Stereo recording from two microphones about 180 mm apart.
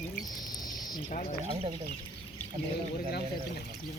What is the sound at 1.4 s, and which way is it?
Speech, 30° right (ahead or behind).